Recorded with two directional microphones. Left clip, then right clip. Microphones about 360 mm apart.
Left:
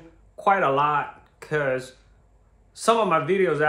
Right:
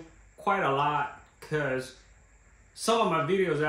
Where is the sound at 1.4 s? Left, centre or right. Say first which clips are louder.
Left 6 dB; centre.